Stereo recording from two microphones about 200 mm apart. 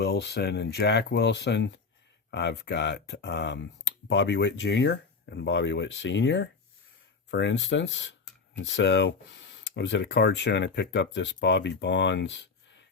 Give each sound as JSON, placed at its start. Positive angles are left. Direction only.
{"t": 0.0, "sound": "speech", "side_deg": 55}